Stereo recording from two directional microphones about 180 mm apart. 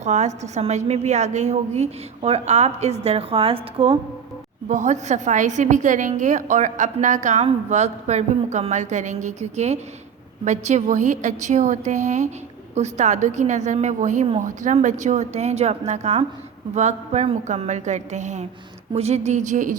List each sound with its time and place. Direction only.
0.0 s a woman's voice: 40° right (ahead or behind)
4.7 s a woman's voice: 40° right (ahead or behind)